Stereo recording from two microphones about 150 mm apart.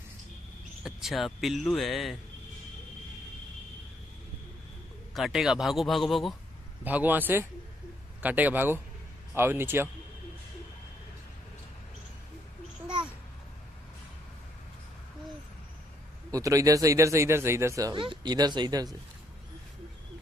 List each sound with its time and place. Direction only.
0.8 s speech: centre (ahead or behind)
5.1 s speech: centre (ahead or behind)
6.8 s speech: 10° right (ahead or behind)
16.3 s speech: 20° right (ahead or behind)
17.9 s speech: 30° right (ahead or behind)